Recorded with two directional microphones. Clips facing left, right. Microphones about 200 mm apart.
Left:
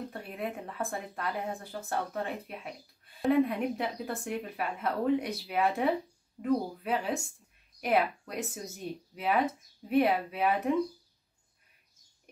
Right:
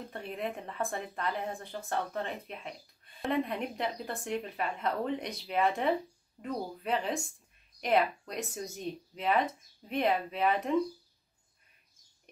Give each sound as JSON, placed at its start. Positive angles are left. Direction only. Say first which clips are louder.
{"t": 0.1, "sound": "a woman's voice", "louder": "even", "side_deg": 5}